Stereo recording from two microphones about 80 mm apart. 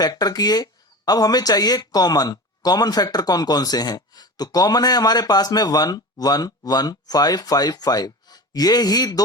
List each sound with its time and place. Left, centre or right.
0.0 s speech: left